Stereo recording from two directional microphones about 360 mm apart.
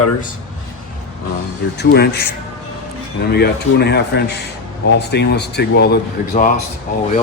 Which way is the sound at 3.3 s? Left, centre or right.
Left.